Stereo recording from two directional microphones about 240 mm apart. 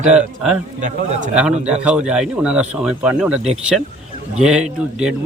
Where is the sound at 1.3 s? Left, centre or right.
Centre.